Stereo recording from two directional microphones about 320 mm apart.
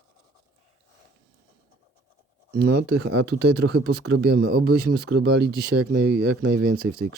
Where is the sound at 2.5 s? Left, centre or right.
Right.